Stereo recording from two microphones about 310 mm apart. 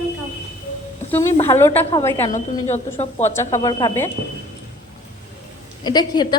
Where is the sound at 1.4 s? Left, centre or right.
Centre.